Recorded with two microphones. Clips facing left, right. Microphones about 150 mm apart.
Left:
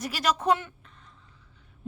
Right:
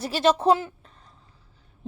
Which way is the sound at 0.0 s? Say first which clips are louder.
Right 6 dB; 25° right (ahead or behind).